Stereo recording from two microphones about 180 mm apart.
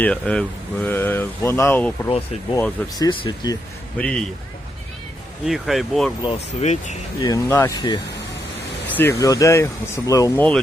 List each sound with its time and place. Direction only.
0.0 s speech: 5° left (ahead or behind)
2.0 s speech: 30° left (ahead or behind)
3.9 s speech: 5° left (ahead or behind)
5.5 s speech: centre (ahead or behind)
6.2 s speech: 40° left (ahead or behind)
7.2 s speech: 20° left (ahead or behind)